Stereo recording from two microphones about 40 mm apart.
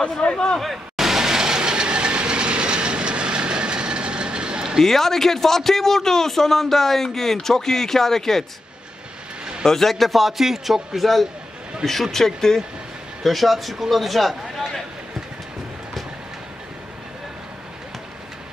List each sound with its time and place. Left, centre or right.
0.0 s speech: left
0.6 s train: centre; by 4.7 s right
4.8 s a man's voice: centre
9.7 s a man's voice: centre